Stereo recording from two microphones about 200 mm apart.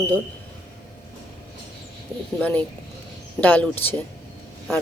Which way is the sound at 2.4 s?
10° left (ahead or behind).